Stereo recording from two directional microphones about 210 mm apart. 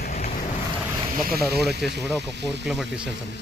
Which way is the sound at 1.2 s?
45° right (ahead or behind).